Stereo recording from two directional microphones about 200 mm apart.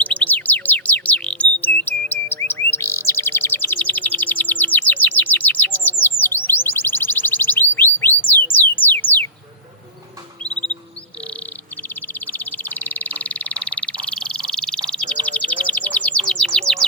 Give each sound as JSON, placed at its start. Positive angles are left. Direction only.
{"t": 0.0, "sound": "bird", "side_deg": 5}
{"t": 2.5, "sound": "chirp", "side_deg": 10}
{"t": 8.7, "sound": "music", "side_deg": 10}
{"t": 12.0, "sound": "frog", "side_deg": 10}
{"t": 16.3, "sound": "bird", "side_deg": 5}